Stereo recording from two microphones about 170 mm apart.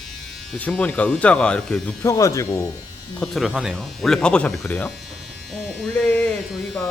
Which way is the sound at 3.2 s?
Centre (ahead or behind).